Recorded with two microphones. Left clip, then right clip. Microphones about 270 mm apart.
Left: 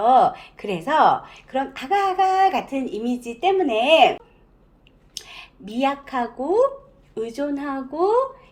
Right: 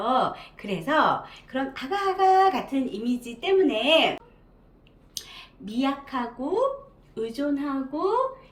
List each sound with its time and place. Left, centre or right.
0.0 s a woman's voice: centre
5.1 s a woman's voice: centre